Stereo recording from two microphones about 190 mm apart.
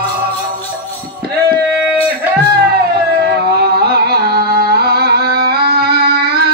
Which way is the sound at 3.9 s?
55° right (ahead or behind).